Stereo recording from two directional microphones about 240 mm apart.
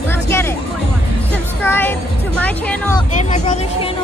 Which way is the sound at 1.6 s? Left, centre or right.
Centre.